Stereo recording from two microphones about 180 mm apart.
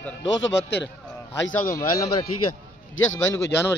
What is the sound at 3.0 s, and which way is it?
Speech, 90° left.